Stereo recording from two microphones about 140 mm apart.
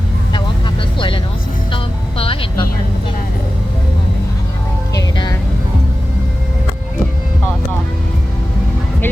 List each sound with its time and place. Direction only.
0.9 s music: 35° left (ahead or behind)
5.1 s music: 30° left (ahead or behind)